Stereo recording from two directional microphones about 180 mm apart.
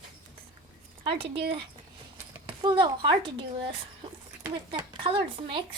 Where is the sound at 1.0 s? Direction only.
30° right (ahead or behind).